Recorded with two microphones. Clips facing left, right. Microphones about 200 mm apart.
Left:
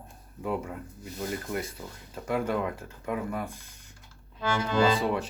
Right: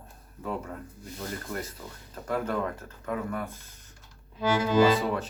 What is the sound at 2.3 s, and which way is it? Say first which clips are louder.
Speech: left 1 dB; 10° left (ahead or behind).